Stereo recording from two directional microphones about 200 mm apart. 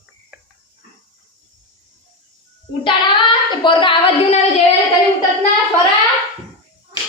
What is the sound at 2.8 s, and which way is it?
Child singing, 25° left (ahead or behind).